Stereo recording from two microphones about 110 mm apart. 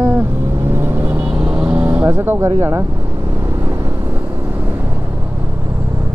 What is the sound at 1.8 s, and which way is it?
Speech, 25° right (ahead or behind).